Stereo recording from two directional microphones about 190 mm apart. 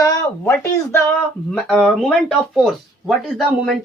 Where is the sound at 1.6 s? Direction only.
5° left (ahead or behind).